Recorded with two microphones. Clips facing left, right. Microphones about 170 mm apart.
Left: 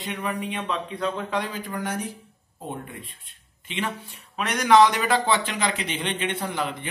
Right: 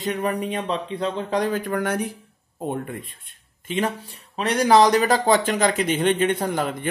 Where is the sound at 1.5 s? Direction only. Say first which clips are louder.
Right 7 dB; 60° right (ahead or behind).